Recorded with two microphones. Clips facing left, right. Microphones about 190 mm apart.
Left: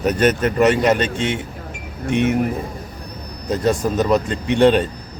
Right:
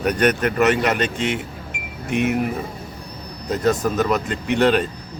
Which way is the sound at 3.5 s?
25° left (ahead or behind).